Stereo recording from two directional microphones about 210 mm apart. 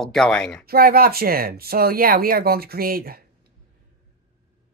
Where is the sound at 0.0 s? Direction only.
Centre (ahead or behind).